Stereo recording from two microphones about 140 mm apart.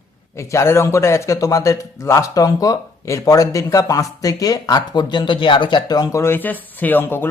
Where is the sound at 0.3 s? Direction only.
20° left (ahead or behind).